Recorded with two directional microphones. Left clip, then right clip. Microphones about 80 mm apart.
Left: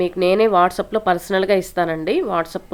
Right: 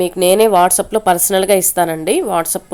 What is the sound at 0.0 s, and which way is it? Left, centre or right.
A woman's voice, right.